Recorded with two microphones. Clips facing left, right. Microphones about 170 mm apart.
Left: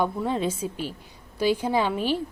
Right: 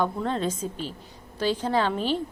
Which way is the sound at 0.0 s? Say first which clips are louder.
Left 1 dB; 10° left (ahead or behind).